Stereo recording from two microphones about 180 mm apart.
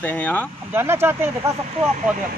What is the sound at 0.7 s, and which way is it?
Speech, 15° right (ahead or behind).